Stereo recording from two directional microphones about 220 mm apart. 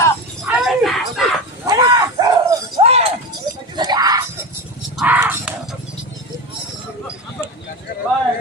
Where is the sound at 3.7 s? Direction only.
20° right (ahead or behind).